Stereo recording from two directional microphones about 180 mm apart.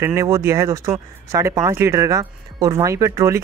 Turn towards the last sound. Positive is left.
turn(degrees=-15)  # may be behind; listen again after turning